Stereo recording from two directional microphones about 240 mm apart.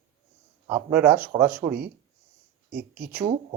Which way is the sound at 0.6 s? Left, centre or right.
Centre.